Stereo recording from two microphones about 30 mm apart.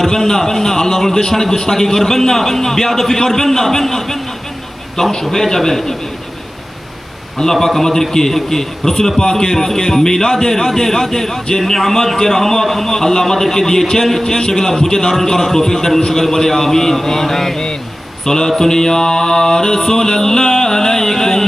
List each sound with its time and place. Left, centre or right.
0.0 s a man's voice: centre
7.3 s a man's voice: centre
14.3 s a man's voice: centre